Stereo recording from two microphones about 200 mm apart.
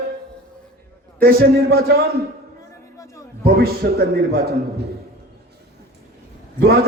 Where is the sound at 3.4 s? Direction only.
50° right (ahead or behind).